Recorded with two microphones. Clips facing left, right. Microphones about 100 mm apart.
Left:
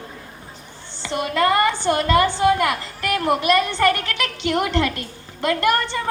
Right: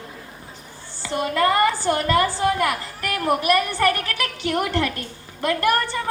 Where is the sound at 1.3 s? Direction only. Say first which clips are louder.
Left 1 dB; 20° left (ahead or behind).